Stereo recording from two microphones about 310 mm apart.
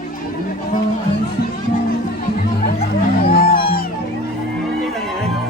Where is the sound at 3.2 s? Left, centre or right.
Left.